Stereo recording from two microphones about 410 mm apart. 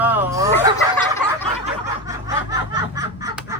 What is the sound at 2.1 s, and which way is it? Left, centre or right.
Snicker, centre.